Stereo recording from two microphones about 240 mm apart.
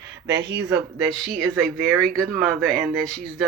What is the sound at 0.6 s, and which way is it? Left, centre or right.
Speech, centre.